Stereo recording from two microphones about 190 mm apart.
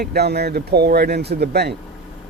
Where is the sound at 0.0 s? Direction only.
55° right (ahead or behind).